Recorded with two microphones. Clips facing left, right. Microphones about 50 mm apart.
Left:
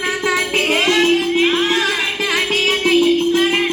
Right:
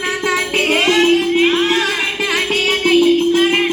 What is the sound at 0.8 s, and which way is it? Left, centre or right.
Music, centre.